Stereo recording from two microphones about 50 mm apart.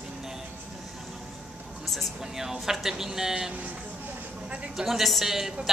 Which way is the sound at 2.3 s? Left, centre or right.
Centre.